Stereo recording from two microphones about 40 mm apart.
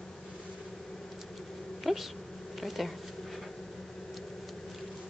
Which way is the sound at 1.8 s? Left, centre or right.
Centre.